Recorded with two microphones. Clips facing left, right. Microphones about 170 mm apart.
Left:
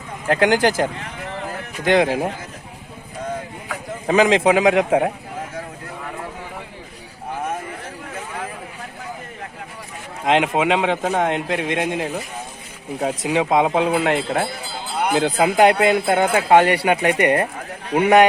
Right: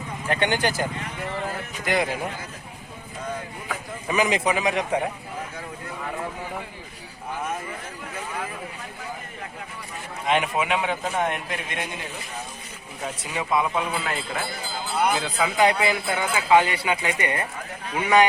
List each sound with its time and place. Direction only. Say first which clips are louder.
0.3 s a man's voice: left 7 dB; 90° left
4.0 s a man's voice: left 8 dB; 90° left
10.2 s a man's voice: left 6 dB; 90° left
13.0 s speech: left 10 dB; 75° left (ahead or behind)
15.1 s speech: left 8 dB; 60° left (ahead or behind)